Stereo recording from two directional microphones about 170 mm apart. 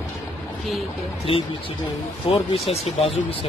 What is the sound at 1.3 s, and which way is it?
Speech, 35° left (ahead or behind).